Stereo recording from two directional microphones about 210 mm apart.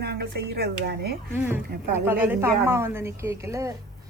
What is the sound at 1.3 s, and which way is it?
Speech, 10° right (ahead or behind).